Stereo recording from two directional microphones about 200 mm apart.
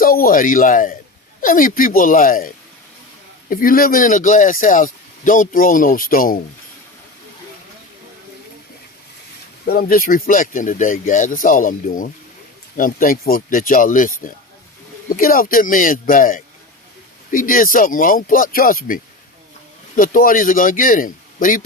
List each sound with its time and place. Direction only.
0.0 s speech: 45° left (ahead or behind)
3.5 s speech: 45° left (ahead or behind)
9.6 s speech: 45° left (ahead or behind)
20.0 s speech: 45° left (ahead or behind)